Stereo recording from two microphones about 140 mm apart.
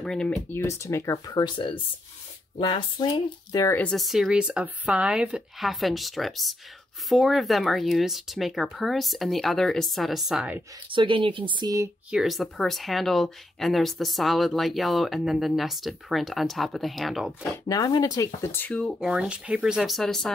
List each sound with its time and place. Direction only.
0.0 s speech: 5° left (ahead or behind)
0.5 s speech: 15° left (ahead or behind)
3.7 s speech: 5° left (ahead or behind)
10.9 s speech: 35° right (ahead or behind)
12.1 s speech: centre (ahead or behind)
17.6 s speech: 25° left (ahead or behind); by 18.9 s 10° left (ahead or behind)
18.9 s speech: 5° right (ahead or behind)